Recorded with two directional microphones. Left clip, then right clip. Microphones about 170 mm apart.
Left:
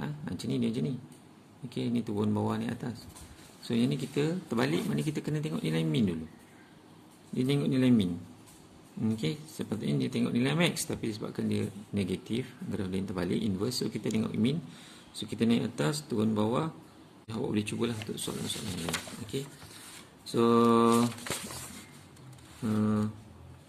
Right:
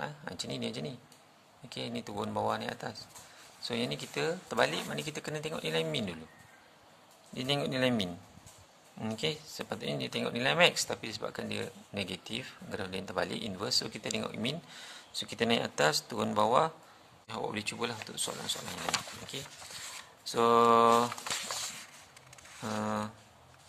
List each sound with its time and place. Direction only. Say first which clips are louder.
0.0 s a sound: even; 35° right (ahead or behind)
1.7 s speech: left 5 dB; 35° right (ahead or behind)
7.3 s speech: left 2 dB; 40° right (ahead or behind)
17.3 s speech: left 2 dB; 35° right (ahead or behind)
19.3 s speech: left 7 dB; 35° right (ahead or behind)
22.7 s speech: left 2 dB; 45° right (ahead or behind)